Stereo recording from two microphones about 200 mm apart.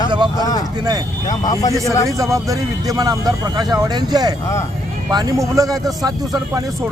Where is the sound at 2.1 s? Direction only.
15° right (ahead or behind).